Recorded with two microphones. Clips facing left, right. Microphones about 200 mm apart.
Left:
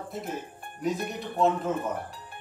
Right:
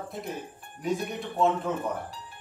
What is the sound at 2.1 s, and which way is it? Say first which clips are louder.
Music: right 1 dB; 55° left (ahead or behind).